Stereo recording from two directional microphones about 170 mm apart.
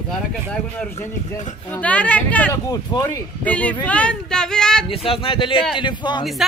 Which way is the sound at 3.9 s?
5° left (ahead or behind).